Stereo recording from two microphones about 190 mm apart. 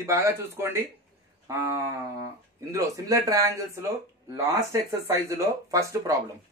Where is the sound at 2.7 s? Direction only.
20° right (ahead or behind).